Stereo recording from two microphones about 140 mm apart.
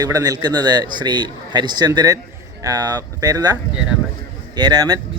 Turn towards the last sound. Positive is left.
turn(degrees=-30)  # may be behind; listen again after turning